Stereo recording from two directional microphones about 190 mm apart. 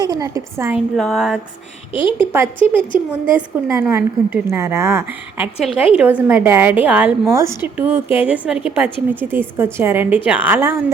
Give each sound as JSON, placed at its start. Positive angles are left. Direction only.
{"t": 0.0, "sound": "a woman's voice", "side_deg": -20}
{"t": 0.9, "sound": "a sound", "side_deg": 0}
{"t": 2.1, "sound": "a woman's voice", "side_deg": -10}